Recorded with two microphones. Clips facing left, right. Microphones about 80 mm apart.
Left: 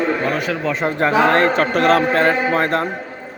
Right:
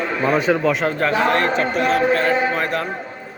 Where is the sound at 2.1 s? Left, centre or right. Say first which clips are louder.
Left 2 dB; left.